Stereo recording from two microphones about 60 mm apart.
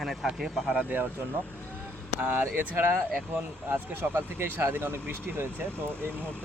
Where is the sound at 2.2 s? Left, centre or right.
Right.